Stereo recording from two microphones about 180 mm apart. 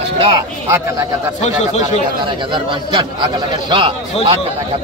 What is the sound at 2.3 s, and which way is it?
Speech, 25° right (ahead or behind).